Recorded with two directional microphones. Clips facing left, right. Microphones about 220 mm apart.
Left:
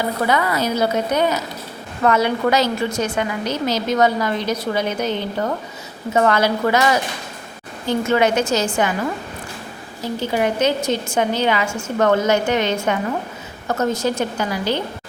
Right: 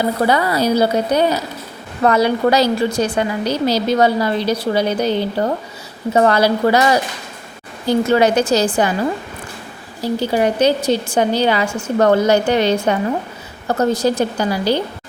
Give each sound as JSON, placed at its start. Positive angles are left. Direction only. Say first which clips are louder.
{"t": 0.3, "sound": "a woman's voice", "louder": "right 3 dB", "side_deg": -35}
{"t": 10.0, "sound": "a woman's voice", "louder": "right 4 dB", "side_deg": -35}